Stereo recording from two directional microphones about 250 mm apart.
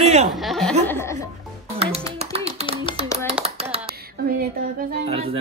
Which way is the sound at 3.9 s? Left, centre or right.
Right.